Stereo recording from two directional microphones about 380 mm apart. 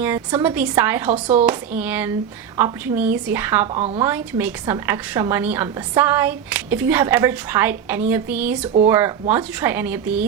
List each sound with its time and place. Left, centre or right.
0.0 s a woman's voice: centre
3.8 s speech: centre
4.0 s a woman's voice: centre